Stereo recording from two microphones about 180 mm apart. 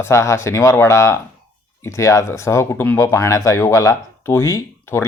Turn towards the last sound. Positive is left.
turn(degrees=15)  # may be behind; listen again after turning